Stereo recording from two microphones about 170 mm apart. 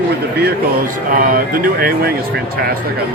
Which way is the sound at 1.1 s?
55° right (ahead or behind).